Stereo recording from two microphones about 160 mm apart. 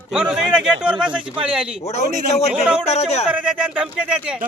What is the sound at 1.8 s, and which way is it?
Speech, 45° left (ahead or behind).